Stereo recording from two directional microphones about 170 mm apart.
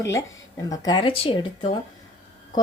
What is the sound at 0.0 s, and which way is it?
Speech, 20° left (ahead or behind).